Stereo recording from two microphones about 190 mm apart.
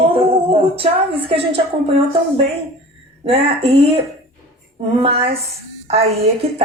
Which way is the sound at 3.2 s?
30° right (ahead or behind).